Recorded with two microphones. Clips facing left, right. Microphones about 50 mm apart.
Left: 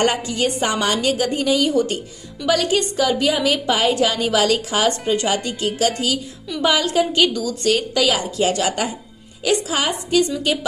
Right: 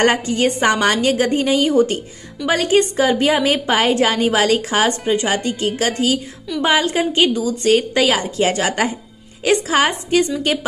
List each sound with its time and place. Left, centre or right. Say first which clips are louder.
0.0 s a woman's voice: right 3 dB; right
5.0 s speech: right 2 dB; right
5.3 s a woman's voice: right 2 dB; right